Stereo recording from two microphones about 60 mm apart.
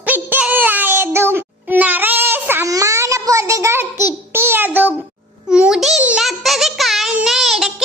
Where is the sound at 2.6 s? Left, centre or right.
Right.